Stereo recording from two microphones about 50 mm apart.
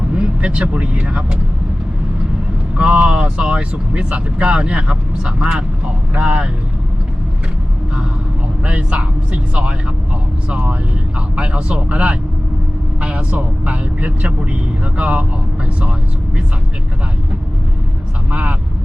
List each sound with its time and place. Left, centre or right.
0.1 s speech: right
2.7 s speech: right
8.6 s speech: right
18.3 s speech: right